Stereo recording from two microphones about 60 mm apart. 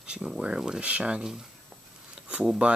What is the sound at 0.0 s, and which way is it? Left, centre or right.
Speech, centre.